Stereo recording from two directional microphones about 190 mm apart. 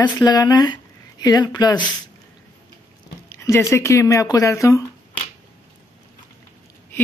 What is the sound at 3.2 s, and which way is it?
Speech, 15° left (ahead or behind).